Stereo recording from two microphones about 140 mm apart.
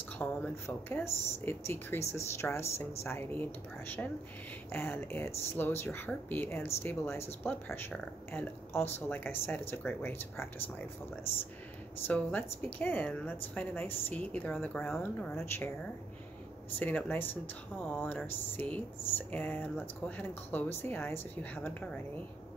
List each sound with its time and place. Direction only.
0.2 s speech: 15° left (ahead or behind)
12.1 s speech: 10° left (ahead or behind)
15.3 s speech: 15° left (ahead or behind)
16.8 s speech: 15° left (ahead or behind)